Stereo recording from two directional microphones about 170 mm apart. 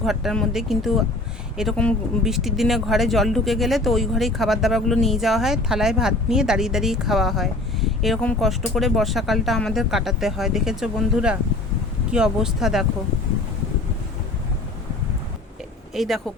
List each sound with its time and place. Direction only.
0.0 s speech: centre (ahead or behind)
16.0 s speech: centre (ahead or behind)